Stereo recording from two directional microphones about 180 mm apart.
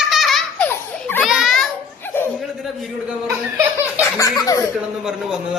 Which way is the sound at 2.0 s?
10° left (ahead or behind).